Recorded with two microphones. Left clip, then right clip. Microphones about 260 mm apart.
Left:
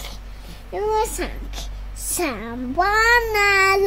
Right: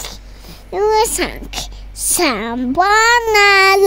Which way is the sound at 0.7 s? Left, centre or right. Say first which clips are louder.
Right 8 dB; right.